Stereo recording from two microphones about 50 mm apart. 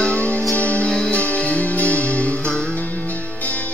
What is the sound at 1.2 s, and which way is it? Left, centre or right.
Music, left.